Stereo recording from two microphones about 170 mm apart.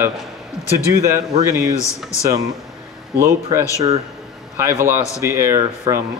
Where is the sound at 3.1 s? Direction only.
15° right (ahead or behind).